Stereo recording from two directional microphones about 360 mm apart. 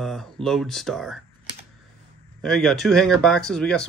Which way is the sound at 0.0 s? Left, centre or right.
Centre.